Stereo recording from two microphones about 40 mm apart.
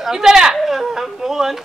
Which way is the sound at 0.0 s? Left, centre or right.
Centre.